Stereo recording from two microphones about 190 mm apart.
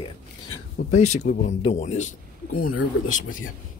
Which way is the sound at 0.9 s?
40° left (ahead or behind).